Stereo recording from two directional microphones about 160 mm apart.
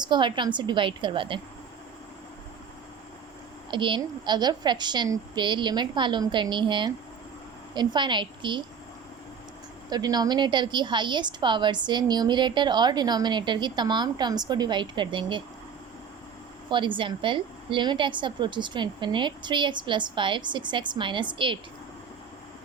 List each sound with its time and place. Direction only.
0.0 s a woman's voice: 30° right (ahead or behind)
3.7 s a woman's voice: 30° right (ahead or behind)
9.9 s a woman's voice: 25° right (ahead or behind)
16.6 s a woman's voice: 30° right (ahead or behind)